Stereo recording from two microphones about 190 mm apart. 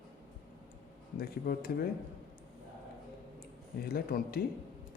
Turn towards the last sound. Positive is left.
turn(degrees=50)  # may be behind; listen again after turning